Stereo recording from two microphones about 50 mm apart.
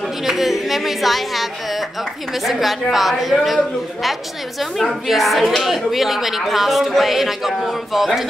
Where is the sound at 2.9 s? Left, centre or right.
Centre.